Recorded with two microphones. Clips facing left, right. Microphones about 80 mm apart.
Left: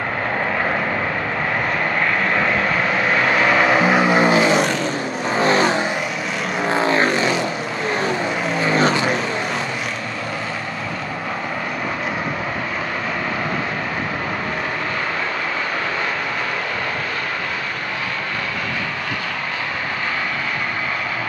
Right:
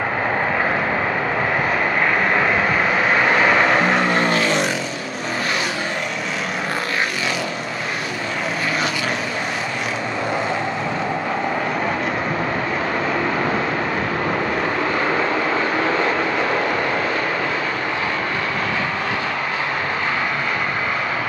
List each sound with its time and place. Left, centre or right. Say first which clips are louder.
2.3 s vehicle: right 1 dB; centre
5.4 s vehicle: left 8 dB; left
6.7 s vehicle: left 8 dB; left